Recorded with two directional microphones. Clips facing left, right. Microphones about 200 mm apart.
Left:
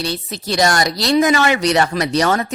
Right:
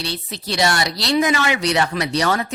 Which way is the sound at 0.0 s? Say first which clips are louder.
Left 4 dB; 45° left (ahead or behind).